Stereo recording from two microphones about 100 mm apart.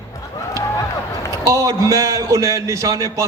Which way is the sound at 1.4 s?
35° right (ahead or behind).